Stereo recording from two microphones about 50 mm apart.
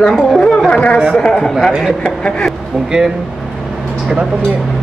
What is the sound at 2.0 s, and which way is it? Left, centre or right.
Speech, centre.